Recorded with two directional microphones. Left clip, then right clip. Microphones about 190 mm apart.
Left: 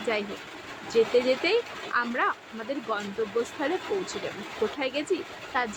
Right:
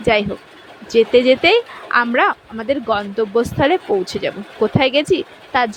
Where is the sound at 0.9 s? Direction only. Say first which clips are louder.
Right 11 dB; 45° right (ahead or behind).